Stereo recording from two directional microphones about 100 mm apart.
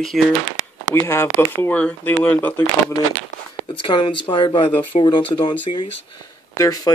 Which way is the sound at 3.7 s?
55° left (ahead or behind).